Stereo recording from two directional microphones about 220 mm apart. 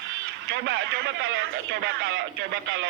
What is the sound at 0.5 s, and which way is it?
A man's voice, 55° right (ahead or behind).